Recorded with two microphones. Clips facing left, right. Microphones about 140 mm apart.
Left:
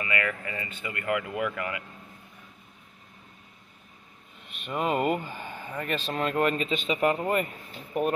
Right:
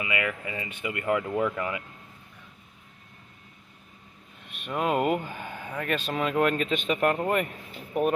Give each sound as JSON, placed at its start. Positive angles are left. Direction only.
{"t": 0.0, "sound": "speech", "side_deg": -15}
{"t": 4.6, "sound": "speech", "side_deg": 0}